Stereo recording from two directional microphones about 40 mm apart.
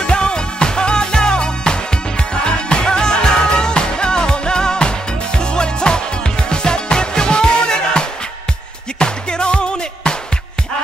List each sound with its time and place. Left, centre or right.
0.0 s music: left
9.0 s music: left